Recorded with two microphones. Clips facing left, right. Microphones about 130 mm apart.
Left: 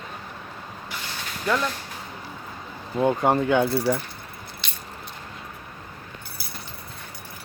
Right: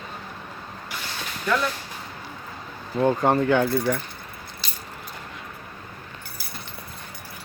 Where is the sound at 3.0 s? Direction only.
10° left (ahead or behind).